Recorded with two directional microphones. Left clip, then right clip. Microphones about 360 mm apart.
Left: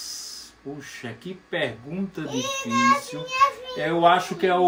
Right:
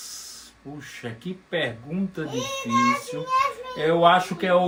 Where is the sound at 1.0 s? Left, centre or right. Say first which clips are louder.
Right 1 dB; centre.